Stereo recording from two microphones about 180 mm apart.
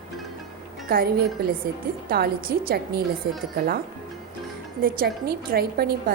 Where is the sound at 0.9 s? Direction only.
60° right (ahead or behind).